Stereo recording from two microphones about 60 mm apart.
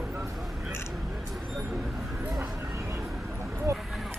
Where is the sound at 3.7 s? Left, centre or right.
Right.